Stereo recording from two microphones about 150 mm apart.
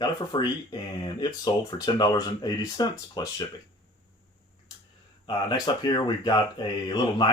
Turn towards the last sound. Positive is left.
turn(degrees=30)  # may be behind; listen again after turning